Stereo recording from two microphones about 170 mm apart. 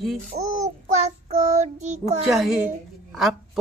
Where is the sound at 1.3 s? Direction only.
45° right (ahead or behind).